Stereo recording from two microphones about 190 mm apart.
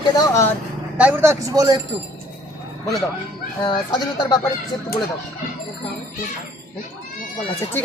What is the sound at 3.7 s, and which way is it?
Speech, 25° left (ahead or behind).